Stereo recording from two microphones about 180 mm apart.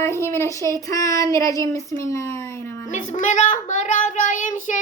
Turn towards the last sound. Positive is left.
turn(degrees=45)  # may be behind; listen again after turning